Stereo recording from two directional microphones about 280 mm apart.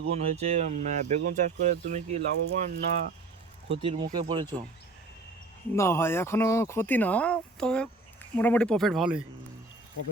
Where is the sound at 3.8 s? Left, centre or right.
Centre.